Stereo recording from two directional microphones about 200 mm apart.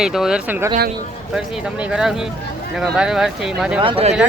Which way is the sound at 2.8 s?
5° right (ahead or behind).